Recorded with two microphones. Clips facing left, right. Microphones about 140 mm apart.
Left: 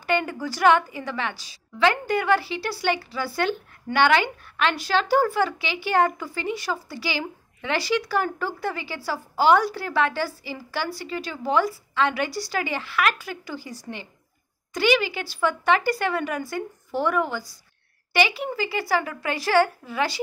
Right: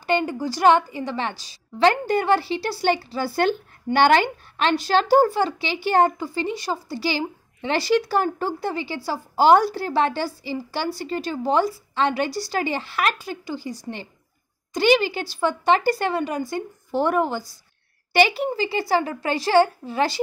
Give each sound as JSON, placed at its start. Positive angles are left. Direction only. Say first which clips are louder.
{"t": 0.0, "sound": "a woman's voice", "louder": "right 2 dB", "side_deg": -25}